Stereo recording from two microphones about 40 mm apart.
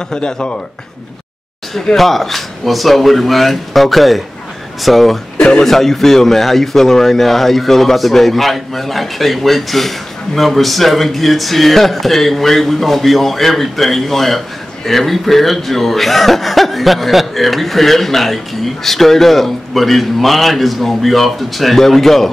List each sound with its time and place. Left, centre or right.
0.1 s speech: left
2.0 s speech: centre